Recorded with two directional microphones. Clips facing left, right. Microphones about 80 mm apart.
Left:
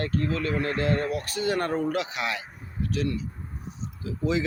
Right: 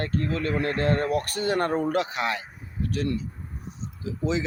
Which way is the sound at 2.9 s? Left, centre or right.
Right.